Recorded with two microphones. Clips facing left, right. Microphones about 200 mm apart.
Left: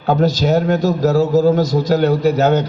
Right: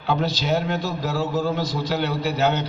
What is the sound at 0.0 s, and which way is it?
A man's voice, 45° left (ahead or behind).